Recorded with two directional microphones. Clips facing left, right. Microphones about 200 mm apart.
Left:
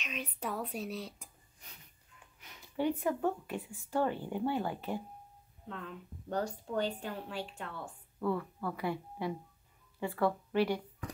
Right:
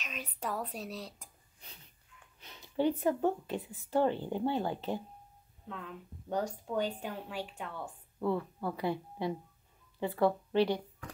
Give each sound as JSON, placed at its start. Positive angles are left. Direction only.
{"t": 0.0, "sound": "speech", "side_deg": 0}
{"t": 2.4, "sound": "a sound", "side_deg": -30}
{"t": 3.1, "sound": "speech", "side_deg": -25}
{"t": 6.2, "sound": "speech", "side_deg": -10}